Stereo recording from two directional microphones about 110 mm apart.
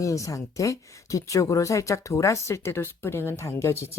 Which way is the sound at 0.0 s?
30° left (ahead or behind).